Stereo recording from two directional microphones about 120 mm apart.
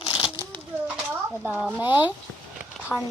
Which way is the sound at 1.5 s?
10° right (ahead or behind).